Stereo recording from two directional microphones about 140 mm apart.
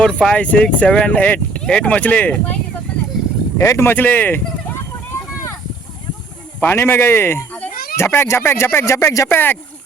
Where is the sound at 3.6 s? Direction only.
20° left (ahead or behind).